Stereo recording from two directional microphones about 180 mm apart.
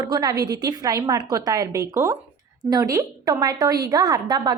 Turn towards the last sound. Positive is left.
turn(degrees=-20)  # may be behind; listen again after turning